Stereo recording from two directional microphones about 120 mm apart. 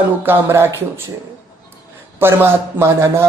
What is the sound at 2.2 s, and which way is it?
Speech, 20° right (ahead or behind).